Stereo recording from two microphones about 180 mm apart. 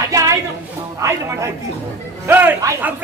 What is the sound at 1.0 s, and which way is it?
Speech, 15° right (ahead or behind).